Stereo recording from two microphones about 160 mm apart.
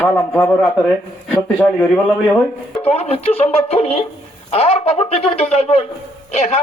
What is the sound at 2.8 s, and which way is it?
Speech, 40° left (ahead or behind).